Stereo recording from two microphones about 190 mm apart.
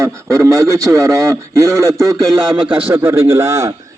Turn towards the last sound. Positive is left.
turn(degrees=-15)  # may be behind; listen again after turning